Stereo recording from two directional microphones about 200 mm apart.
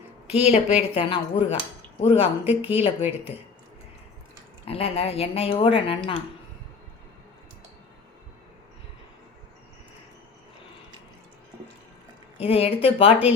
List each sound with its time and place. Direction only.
0.3 s a woman's voice: 30° left (ahead or behind)
2.4 s speech: 10° right (ahead or behind)
2.6 s speech: 25° left (ahead or behind)
4.6 s speech: 30° left (ahead or behind)
12.4 s speech: 30° left (ahead or behind)